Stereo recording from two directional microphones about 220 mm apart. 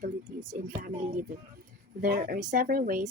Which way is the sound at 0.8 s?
35° right (ahead or behind).